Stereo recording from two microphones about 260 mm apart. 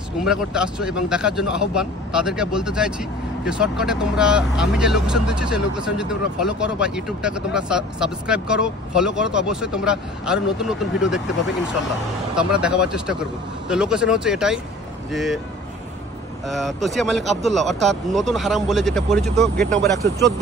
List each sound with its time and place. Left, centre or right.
0.2 s speech: centre
12.4 s speech: centre
16.4 s speech: centre